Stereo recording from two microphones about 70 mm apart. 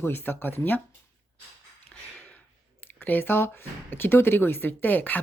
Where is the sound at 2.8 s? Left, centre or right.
Left.